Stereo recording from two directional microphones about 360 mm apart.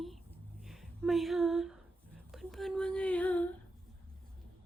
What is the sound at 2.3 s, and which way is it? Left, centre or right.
Child singing, centre.